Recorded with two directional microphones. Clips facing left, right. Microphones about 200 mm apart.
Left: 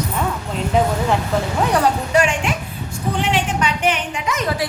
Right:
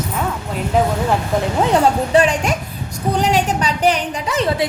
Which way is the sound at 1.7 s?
25° right (ahead or behind).